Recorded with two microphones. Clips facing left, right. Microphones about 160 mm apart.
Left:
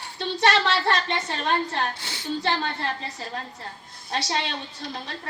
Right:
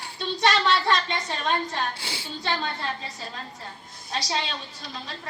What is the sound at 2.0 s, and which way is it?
Speech, 10° right (ahead or behind).